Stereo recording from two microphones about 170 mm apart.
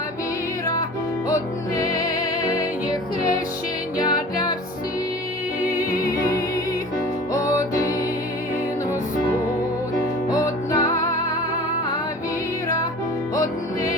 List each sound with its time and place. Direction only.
3.9 s music: 25° left (ahead or behind)
6.0 s music: 20° left (ahead or behind)
10.2 s music: 20° left (ahead or behind)